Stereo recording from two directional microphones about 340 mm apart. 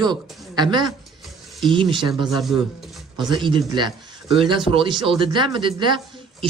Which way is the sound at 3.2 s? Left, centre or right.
Centre.